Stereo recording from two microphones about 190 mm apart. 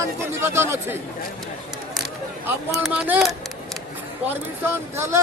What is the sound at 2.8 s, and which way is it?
Speech, 10° right (ahead or behind).